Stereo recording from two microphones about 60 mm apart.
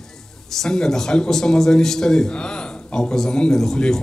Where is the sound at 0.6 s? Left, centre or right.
Centre.